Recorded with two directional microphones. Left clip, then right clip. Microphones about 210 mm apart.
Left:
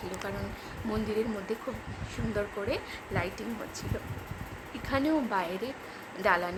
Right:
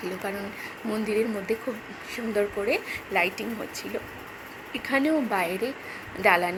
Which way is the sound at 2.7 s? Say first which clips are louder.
Right 7 dB; 10° right (ahead or behind).